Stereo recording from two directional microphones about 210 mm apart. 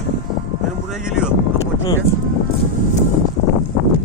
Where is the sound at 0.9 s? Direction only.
Centre (ahead or behind).